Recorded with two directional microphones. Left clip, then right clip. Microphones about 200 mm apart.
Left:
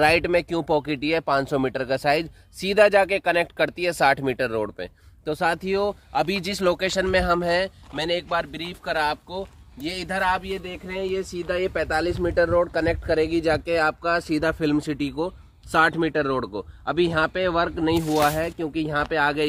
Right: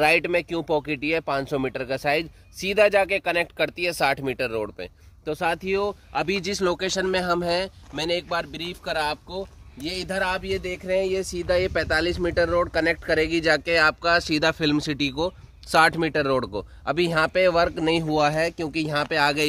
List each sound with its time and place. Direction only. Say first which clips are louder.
0.0 s speech: left 1 dB; 50° left (ahead or behind)
6.5 s speech: left 4 dB; 25° left (ahead or behind); by 10.0 s 5° right (ahead or behind)
10.0 s speech: left 3 dB; 20° right (ahead or behind)
10.6 s speech: right 6 dB; 55° right (ahead or behind)